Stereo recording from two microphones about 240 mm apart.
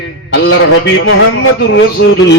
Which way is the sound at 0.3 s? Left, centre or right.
Left.